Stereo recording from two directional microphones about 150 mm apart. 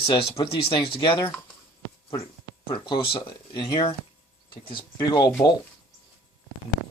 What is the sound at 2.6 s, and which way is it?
Speech, 35° left (ahead or behind).